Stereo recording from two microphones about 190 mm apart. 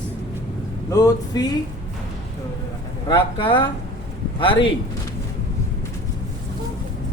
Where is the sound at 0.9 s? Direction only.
20° left (ahead or behind).